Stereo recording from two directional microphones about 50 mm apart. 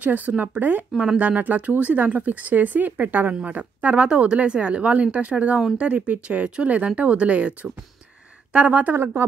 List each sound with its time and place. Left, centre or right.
0.0 s speech: right
0.9 s speech: right
8.9 s speech: right